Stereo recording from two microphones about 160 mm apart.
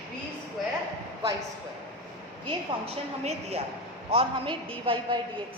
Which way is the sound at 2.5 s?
40° right (ahead or behind).